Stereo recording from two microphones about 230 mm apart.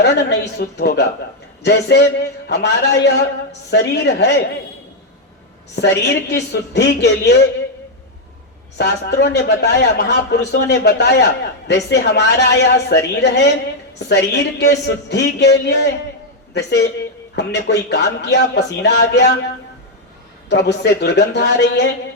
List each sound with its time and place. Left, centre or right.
0.0 s speech: left
5.7 s speech: left
8.8 s speech: left
20.5 s speech: left